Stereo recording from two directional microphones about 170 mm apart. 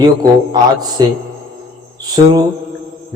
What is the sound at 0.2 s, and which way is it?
Speech, 25° right (ahead or behind).